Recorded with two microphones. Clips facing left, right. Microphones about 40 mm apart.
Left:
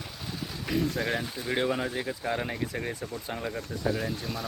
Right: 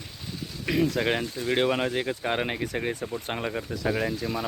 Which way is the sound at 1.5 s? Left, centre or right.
Right.